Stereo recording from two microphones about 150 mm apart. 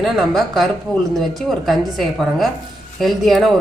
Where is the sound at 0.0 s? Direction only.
Centre (ahead or behind).